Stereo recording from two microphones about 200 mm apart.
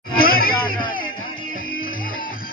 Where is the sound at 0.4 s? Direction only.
45° left (ahead or behind).